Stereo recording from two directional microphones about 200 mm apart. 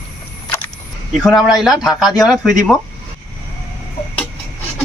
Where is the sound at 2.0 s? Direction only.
20° left (ahead or behind).